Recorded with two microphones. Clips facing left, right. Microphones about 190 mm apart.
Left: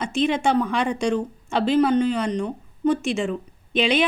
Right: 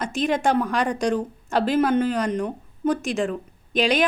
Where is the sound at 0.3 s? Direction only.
Centre (ahead or behind).